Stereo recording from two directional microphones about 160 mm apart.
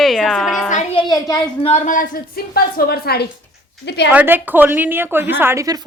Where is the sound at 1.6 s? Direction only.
50° left (ahead or behind); by 3.2 s 80° left.